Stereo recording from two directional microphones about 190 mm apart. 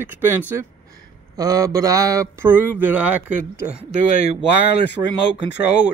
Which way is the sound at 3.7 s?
35° right (ahead or behind).